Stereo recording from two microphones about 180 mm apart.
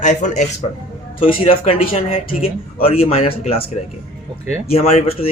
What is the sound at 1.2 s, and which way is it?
Speech, 30° left (ahead or behind).